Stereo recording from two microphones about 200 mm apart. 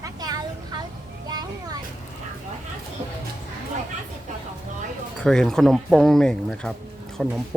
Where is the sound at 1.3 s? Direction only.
20° right (ahead or behind).